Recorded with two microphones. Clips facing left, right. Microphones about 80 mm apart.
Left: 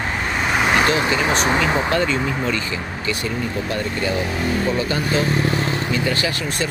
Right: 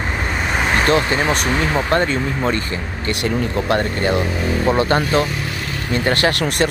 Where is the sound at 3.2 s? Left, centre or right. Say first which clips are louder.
Right 4 dB; right.